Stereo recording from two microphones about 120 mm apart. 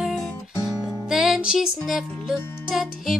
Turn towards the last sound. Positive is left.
turn(degrees=0)  # may be behind; listen again after turning